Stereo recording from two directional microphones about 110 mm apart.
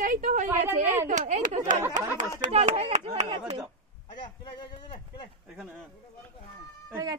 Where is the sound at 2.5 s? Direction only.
65° right (ahead or behind).